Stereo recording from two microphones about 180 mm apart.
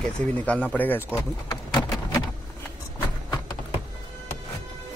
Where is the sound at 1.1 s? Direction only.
20° left (ahead or behind).